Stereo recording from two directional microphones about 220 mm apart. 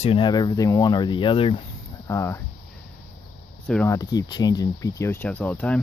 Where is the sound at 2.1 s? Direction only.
10° left (ahead or behind).